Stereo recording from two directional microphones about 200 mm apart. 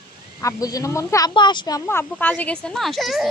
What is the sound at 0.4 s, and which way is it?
Speech, 15° left (ahead or behind).